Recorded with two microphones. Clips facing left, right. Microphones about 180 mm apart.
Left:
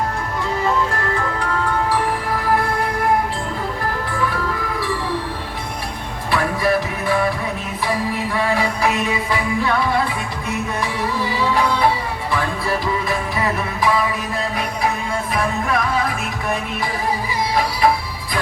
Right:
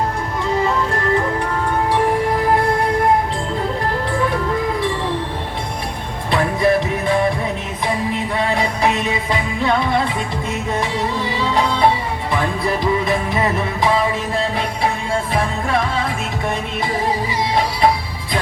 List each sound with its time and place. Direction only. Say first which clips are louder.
6.3 s music: right 3 dB; 20° right (ahead or behind)
8.4 s music: even; 20° right (ahead or behind)